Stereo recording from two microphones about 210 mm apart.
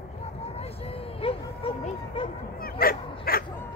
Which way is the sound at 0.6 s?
30° left (ahead or behind).